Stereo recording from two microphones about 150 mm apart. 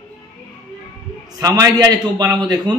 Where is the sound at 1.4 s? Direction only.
25° right (ahead or behind).